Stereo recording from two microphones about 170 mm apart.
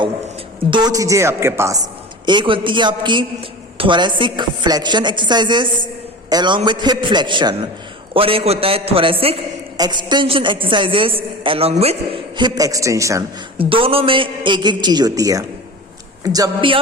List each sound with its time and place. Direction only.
0.7 s a woman's voice: 25° right (ahead or behind)
2.2 s a woman's voice: 30° right (ahead or behind)
13.6 s a woman's voice: 30° right (ahead or behind)